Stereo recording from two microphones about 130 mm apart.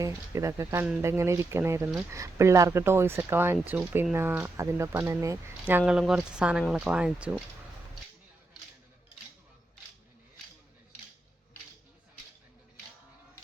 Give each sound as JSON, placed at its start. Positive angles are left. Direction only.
{"t": 0.0, "sound": "speech", "side_deg": -25}
{"t": 5.8, "sound": "speech", "side_deg": -5}